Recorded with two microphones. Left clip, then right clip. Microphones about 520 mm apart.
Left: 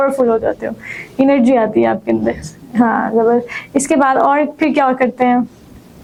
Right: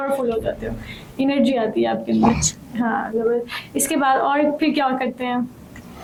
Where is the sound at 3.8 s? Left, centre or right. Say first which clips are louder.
Left 6 dB; left.